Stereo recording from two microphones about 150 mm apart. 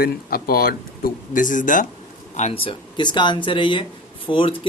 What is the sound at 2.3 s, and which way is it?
Speech, 45° left (ahead or behind).